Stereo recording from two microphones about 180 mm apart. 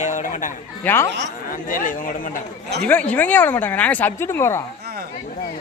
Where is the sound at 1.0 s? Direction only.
70° right (ahead or behind).